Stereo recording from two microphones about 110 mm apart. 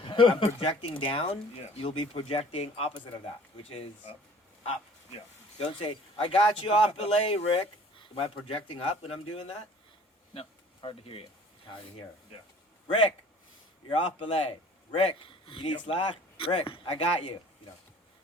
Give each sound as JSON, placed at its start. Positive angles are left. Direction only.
{"t": 0.0, "sound": "speech", "side_deg": 50}
{"t": 5.6, "sound": "speech", "side_deg": 50}
{"t": 13.9, "sound": "speech", "side_deg": 55}